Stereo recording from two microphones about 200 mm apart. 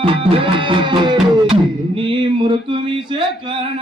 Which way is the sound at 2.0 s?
25° right (ahead or behind).